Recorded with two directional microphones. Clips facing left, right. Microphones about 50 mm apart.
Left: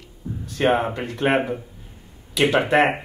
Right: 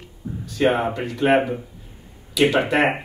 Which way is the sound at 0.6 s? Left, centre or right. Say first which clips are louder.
Even; left.